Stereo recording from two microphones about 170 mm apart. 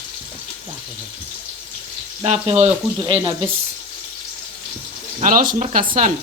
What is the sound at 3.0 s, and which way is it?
Speech, 20° right (ahead or behind).